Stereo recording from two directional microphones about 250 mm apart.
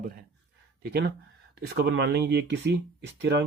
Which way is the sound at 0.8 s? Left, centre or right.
Right.